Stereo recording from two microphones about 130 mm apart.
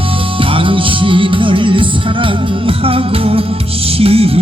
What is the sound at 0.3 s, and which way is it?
Music, 40° right (ahead or behind).